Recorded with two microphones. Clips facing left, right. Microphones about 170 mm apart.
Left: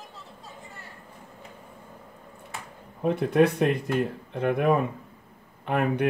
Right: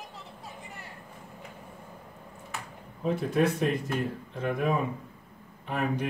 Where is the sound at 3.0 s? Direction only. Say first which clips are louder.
Left 5 dB; 65° left (ahead or behind).